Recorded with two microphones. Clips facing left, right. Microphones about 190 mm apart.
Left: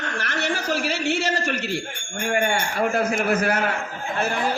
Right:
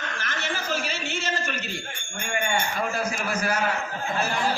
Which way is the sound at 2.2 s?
65° left (ahead or behind).